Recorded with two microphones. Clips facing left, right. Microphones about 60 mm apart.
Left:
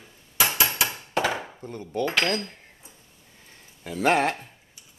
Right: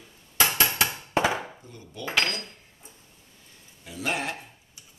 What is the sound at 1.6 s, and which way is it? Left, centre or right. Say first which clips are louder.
Speech: left 9 dB; left.